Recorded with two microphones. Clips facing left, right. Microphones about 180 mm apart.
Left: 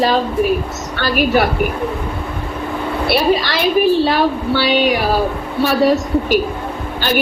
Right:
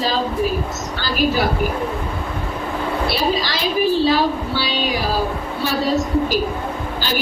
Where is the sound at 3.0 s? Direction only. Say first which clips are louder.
Left 8 dB; 65° left (ahead or behind).